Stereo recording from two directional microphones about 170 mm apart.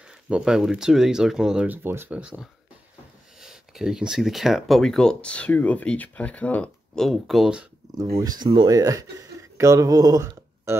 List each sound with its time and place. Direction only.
0.3 s speech: 5° right (ahead or behind)
3.3 s speech: 5° right (ahead or behind)
8.0 s speech: 20° right (ahead or behind)